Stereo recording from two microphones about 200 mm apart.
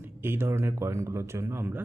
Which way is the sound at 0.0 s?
10° right (ahead or behind).